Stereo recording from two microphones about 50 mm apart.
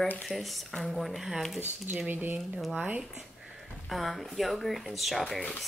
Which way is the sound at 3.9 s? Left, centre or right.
Centre.